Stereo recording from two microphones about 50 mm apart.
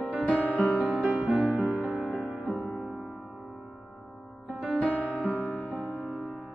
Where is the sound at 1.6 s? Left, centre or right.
Right.